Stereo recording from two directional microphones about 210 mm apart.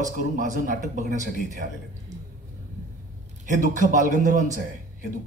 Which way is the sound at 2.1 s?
35° right (ahead or behind).